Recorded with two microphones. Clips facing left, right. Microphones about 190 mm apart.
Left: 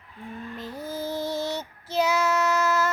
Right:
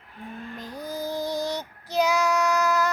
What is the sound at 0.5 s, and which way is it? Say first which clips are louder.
Child singing: even; 5° left (ahead or behind).